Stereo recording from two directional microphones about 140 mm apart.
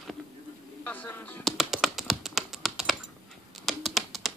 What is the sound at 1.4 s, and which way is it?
Computer keyboard, centre (ahead or behind).